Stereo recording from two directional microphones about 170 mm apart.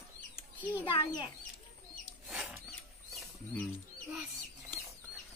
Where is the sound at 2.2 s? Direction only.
10° right (ahead or behind).